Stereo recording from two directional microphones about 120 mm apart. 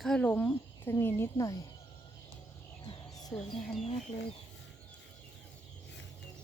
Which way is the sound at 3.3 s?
5° left (ahead or behind).